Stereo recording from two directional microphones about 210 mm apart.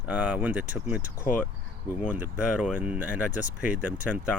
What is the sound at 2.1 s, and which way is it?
Speech, 5° right (ahead or behind).